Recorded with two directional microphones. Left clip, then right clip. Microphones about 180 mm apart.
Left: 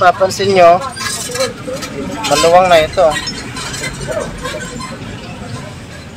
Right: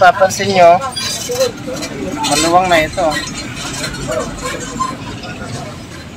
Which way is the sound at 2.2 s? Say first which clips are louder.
Left 3 dB; 65° left (ahead or behind).